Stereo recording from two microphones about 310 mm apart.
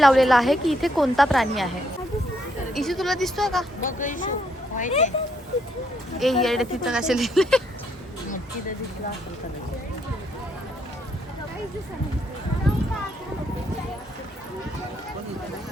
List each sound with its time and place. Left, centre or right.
0.0 s a woman's voice: centre
2.7 s a woman's voice: centre
3.8 s speech: left
6.1 s a woman's voice: centre